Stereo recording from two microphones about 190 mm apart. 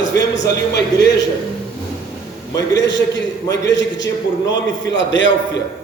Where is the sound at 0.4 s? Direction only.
60° left (ahead or behind).